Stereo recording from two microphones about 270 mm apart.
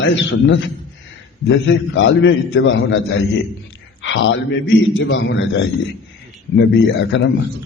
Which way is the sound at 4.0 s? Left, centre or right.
Left.